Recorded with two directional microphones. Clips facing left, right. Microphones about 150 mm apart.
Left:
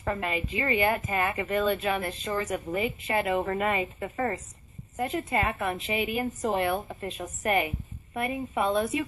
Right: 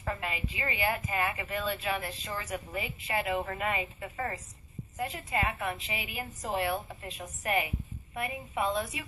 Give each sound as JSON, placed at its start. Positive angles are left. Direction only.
{"t": 0.0, "sound": "a woman's voice", "side_deg": 45}